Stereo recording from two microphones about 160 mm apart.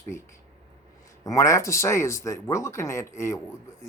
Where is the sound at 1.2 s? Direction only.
20° left (ahead or behind).